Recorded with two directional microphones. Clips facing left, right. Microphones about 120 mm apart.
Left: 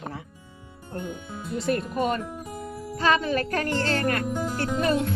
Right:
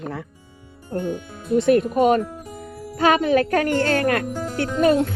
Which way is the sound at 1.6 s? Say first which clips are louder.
Right 8 dB; 55° right (ahead or behind).